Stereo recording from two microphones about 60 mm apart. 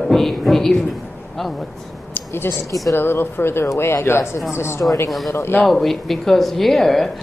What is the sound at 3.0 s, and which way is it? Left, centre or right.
Speech, left.